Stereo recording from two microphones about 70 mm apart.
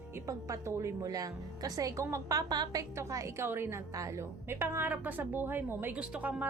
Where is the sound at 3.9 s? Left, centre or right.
Right.